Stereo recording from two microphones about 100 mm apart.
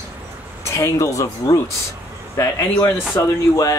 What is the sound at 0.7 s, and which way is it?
Speech, 30° left (ahead or behind).